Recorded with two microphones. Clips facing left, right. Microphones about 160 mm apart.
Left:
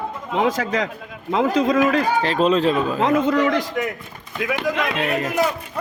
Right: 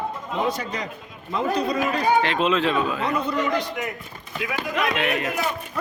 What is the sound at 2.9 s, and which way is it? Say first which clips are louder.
Speech: left 7 dB; 90° left.